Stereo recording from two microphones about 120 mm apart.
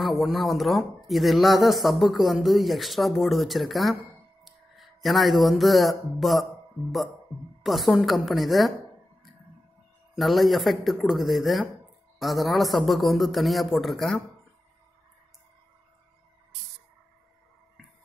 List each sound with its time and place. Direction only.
0.0 s speech: centre (ahead or behind)
4.5 s a sound: centre (ahead or behind)
5.4 s speech: centre (ahead or behind)
7.6 s speech: centre (ahead or behind)
10.1 s speech: centre (ahead or behind)